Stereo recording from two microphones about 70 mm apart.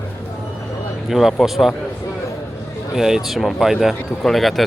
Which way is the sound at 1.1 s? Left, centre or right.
Centre.